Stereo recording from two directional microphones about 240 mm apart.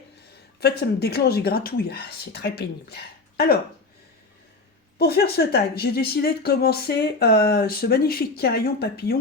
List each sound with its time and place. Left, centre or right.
0.6 s speech: left
4.9 s speech: left